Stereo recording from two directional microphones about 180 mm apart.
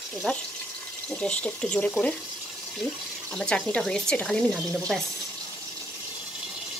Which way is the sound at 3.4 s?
5° left (ahead or behind).